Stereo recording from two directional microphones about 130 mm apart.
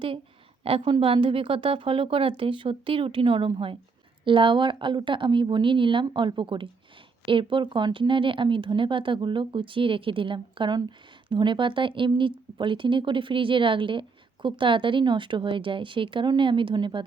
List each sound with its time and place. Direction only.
0.6 s a woman's voice: 40° right (ahead or behind)